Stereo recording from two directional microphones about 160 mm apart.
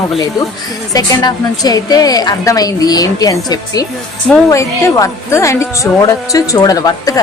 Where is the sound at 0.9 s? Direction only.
25° left (ahead or behind).